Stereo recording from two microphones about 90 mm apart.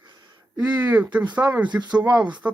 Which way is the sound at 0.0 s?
55° right (ahead or behind).